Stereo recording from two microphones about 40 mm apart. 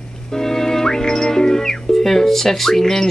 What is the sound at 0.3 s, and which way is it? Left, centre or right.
Music, centre.